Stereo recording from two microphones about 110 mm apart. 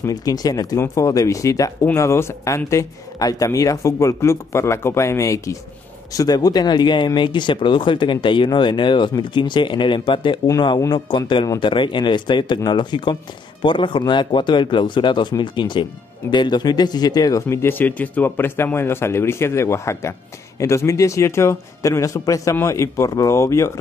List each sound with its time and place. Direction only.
0.0 s speech: 35° left (ahead or behind)